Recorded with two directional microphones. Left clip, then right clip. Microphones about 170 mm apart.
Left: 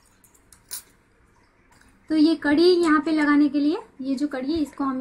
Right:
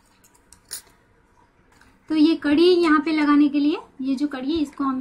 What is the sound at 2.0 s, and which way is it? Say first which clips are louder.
A woman's voice: right 1 dB; 30° right (ahead or behind).